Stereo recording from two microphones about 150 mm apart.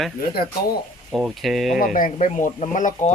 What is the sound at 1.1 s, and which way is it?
Speech, centre (ahead or behind).